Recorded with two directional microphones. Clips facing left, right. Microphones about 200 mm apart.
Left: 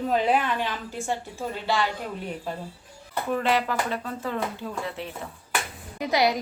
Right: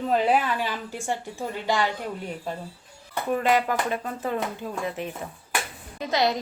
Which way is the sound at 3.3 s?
15° right (ahead or behind).